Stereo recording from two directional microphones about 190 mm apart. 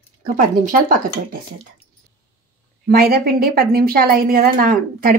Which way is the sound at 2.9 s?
55° right (ahead or behind).